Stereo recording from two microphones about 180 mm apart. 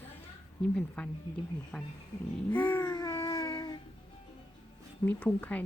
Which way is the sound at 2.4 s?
10° left (ahead or behind).